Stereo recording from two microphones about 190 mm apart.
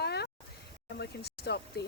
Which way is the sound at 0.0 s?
60° left (ahead or behind).